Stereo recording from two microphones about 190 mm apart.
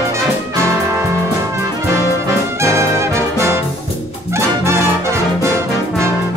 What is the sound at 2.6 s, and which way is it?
Brass instrument, 15° right (ahead or behind).